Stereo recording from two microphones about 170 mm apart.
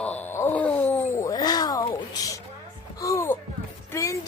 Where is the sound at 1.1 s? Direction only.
20° left (ahead or behind).